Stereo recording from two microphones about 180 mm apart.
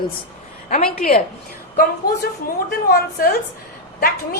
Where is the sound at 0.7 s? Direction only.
50° left (ahead or behind).